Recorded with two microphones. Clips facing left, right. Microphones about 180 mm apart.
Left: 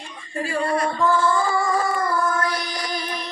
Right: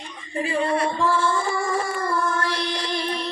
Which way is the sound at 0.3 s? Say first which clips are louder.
Right 1 dB; 20° right (ahead or behind).